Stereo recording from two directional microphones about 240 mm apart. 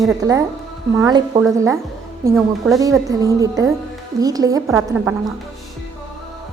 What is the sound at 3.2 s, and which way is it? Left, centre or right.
A woman's voice, centre.